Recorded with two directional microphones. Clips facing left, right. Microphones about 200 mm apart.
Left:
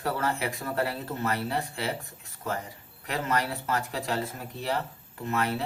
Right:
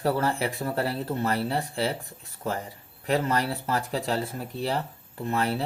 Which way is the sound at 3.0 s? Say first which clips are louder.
Right 4 dB; 35° right (ahead or behind).